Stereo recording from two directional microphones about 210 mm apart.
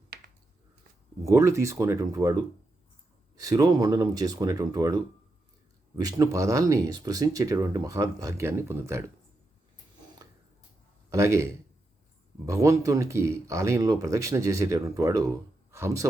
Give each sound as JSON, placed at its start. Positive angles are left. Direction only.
{"t": 1.2, "sound": "speech", "side_deg": -15}
{"t": 11.1, "sound": "speech", "side_deg": -15}
{"t": 12.5, "sound": "speech", "side_deg": -15}